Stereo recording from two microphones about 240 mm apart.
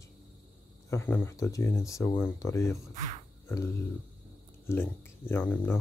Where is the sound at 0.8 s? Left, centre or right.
Centre.